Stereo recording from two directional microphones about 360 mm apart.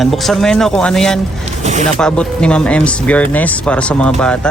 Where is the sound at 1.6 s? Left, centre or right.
Centre.